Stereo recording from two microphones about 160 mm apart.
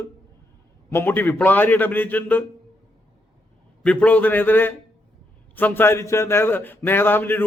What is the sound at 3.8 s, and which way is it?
A man's voice, 10° left (ahead or behind).